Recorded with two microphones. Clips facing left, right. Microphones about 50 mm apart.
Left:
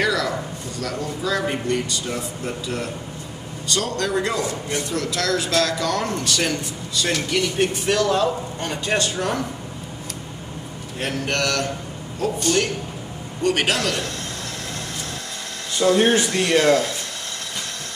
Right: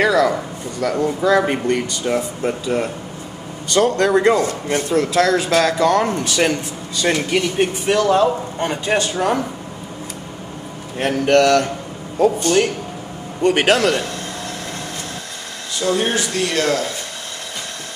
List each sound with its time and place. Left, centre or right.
0.0 s a man's voice: right
11.0 s a man's voice: right
13.7 s a man's voice: right
15.8 s speech: centre